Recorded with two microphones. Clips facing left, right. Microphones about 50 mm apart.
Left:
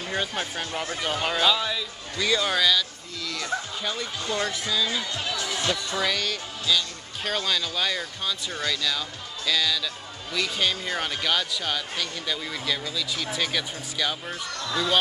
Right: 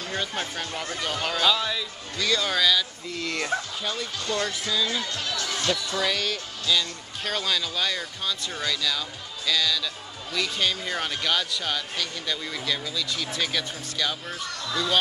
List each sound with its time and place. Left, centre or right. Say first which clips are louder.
0.6 s speech: left 1 dB; centre
1.4 s speech: right 1 dB; centre
3.2 s speech: right 3 dB; right
3.8 s speech: even; centre
6.0 s speech: even; centre